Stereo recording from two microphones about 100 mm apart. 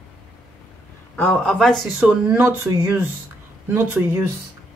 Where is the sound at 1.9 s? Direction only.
15° right (ahead or behind).